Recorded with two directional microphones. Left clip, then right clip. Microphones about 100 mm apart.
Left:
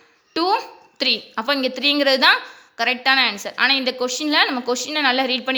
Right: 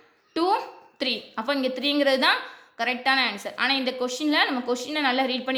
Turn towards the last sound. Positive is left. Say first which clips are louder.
# left 5 dB
turn(degrees=35)  # may be behind; listen again after turning